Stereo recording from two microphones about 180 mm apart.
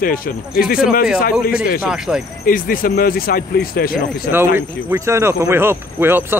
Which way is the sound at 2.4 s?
50° left (ahead or behind).